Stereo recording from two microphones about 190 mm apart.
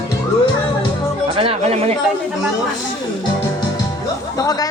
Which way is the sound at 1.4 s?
30° right (ahead or behind).